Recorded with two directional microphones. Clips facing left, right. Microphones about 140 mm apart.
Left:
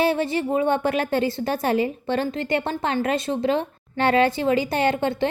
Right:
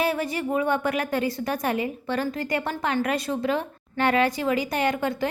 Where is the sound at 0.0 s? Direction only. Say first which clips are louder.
Left 4 dB; 25° left (ahead or behind).